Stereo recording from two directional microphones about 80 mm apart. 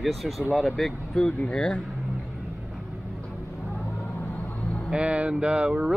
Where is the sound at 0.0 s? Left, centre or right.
Centre.